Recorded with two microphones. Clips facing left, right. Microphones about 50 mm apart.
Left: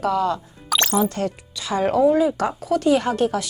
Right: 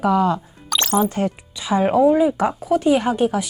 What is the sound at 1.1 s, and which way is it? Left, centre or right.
Speech, centre.